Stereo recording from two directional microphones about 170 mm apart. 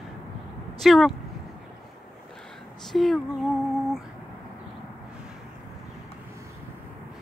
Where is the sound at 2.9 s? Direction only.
Centre (ahead or behind).